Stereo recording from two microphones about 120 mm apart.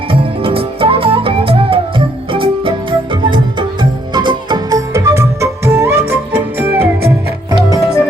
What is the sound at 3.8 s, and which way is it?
Music, 40° right (ahead or behind).